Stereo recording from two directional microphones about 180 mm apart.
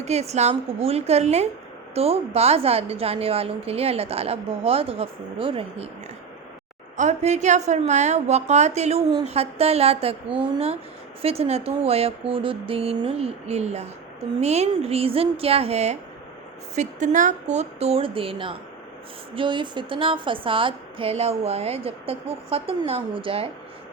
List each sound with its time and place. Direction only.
0.0 s a woman's voice: 40° right (ahead or behind)
6.9 s a woman's voice: 40° right (ahead or behind)